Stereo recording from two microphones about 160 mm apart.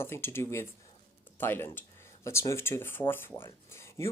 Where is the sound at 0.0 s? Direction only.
15° left (ahead or behind).